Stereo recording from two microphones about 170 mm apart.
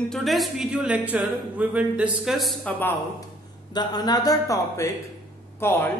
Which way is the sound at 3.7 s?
25° left (ahead or behind).